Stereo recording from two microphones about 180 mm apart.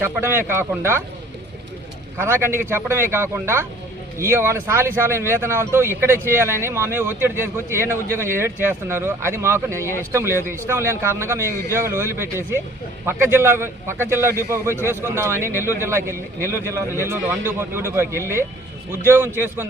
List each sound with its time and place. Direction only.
0.0 s speech: 10° right (ahead or behind)
2.2 s speech: 15° right (ahead or behind)